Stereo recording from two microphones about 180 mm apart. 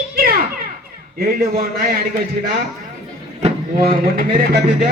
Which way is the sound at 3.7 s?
55° right (ahead or behind).